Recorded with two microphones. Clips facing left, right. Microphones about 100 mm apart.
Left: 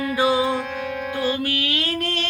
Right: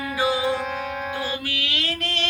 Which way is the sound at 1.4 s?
50° left (ahead or behind).